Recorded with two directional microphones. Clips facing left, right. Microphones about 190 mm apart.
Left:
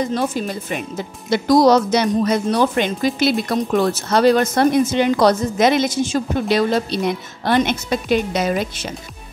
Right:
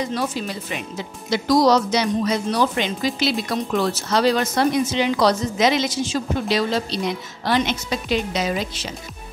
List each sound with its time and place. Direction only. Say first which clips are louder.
0.0 s speech: left 4 dB; 50° left (ahead or behind)